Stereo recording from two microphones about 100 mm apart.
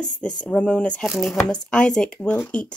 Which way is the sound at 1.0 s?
Centre (ahead or behind).